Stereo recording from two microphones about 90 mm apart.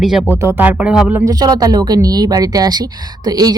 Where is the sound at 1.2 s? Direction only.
45° right (ahead or behind).